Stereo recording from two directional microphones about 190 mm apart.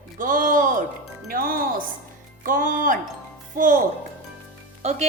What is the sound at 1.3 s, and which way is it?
A woman's voice, 50° right (ahead or behind).